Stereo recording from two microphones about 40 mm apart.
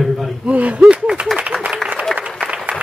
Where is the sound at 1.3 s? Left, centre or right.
Right.